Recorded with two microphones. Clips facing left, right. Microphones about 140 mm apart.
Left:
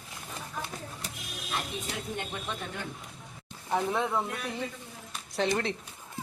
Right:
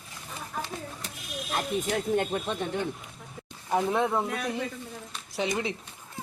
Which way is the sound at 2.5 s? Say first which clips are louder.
Right 7 dB; 30° right (ahead or behind).